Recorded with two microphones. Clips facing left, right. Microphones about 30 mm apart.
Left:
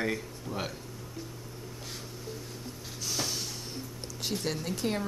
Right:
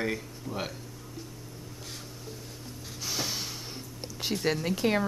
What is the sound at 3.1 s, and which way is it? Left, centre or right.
Snort, centre.